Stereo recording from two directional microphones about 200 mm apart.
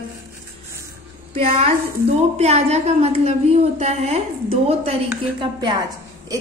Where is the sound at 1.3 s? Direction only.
30° right (ahead or behind).